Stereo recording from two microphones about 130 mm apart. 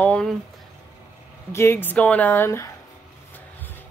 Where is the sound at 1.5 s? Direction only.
20° left (ahead or behind).